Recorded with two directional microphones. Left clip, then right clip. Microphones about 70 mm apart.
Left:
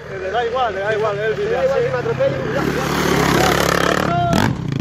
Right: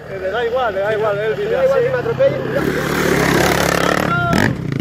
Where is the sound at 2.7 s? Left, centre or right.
Centre.